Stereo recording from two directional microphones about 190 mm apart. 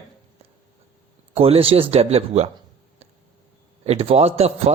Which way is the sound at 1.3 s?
30° right (ahead or behind).